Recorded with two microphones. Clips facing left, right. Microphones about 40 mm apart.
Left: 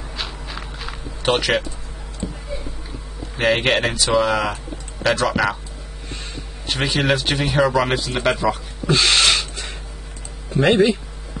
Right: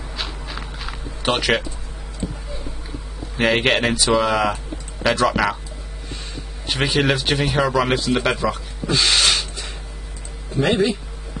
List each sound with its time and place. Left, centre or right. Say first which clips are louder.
0.2 s walk: even; centre
3.3 s a man's voice: even; centre
6.6 s a man's voice: right 1 dB; centre
8.8 s a sound: left 2 dB; left